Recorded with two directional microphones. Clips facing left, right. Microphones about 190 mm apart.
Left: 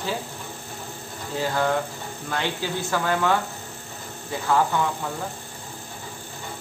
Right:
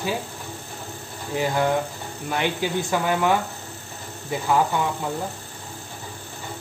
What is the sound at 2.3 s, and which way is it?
Speech, 15° right (ahead or behind).